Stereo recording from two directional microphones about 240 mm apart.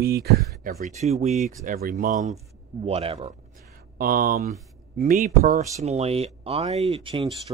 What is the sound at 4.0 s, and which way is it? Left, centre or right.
Speech, right.